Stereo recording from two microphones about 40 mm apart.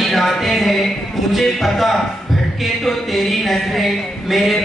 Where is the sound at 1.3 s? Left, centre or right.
Centre.